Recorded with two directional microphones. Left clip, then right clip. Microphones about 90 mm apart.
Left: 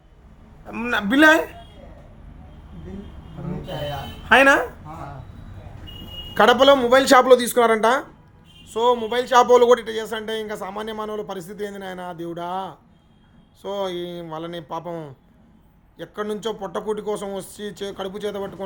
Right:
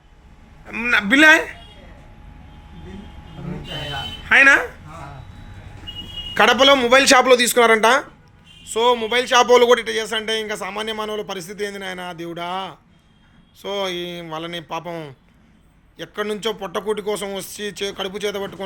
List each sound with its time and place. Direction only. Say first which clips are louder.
0.7 s a man's voice: right 5 dB; 45° left (ahead or behind)
0.9 s speech: right 3 dB; 20° left (ahead or behind)
4.3 s speech: right 2 dB; 40° left (ahead or behind)
6.3 s a man's voice: right 1 dB; 20° left (ahead or behind)